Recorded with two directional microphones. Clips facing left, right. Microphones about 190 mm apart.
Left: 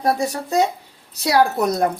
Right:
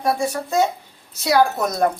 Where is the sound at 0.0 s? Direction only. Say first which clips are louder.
Left 1 dB; 35° left (ahead or behind).